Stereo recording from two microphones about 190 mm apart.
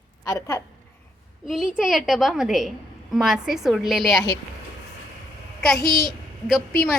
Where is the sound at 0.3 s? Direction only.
15° left (ahead or behind).